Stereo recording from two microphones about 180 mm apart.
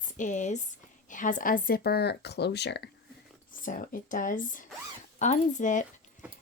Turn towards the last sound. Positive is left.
turn(degrees=45)  # may be behind; listen again after turning